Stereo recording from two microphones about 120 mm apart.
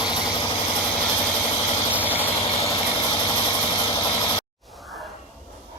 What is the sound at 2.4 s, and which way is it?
Vehicle, 60° left (ahead or behind).